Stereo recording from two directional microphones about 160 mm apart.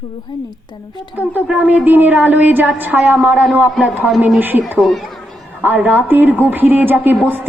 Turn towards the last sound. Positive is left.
turn(degrees=-10)  # may be behind; listen again after turning